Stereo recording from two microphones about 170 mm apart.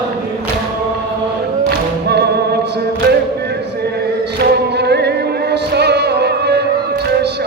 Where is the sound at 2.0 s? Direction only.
75° right (ahead or behind).